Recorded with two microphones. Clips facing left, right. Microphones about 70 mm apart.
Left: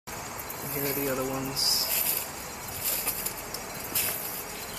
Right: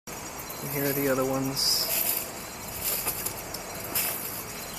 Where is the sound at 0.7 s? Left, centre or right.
Right.